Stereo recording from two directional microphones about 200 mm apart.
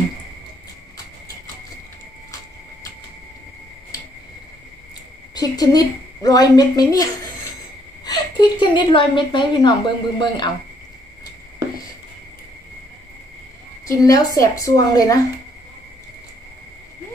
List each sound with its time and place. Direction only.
5.3 s a woman's voice: 20° left (ahead or behind)
13.8 s a woman's voice: 15° left (ahead or behind)